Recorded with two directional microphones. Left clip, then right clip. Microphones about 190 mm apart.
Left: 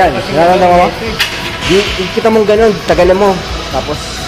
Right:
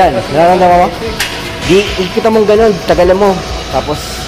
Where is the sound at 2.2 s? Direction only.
5° right (ahead or behind).